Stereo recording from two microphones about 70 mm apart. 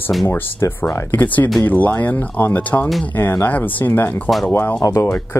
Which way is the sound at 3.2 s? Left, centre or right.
Left.